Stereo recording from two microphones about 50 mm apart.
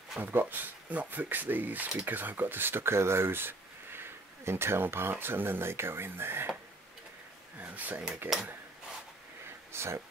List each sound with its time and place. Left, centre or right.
0.2 s speech: right
7.5 s a sound: right
8.2 s speech: right
9.7 s speech: right